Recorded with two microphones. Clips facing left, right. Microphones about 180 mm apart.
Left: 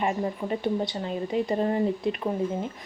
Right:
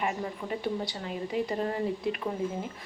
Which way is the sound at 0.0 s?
30° left (ahead or behind).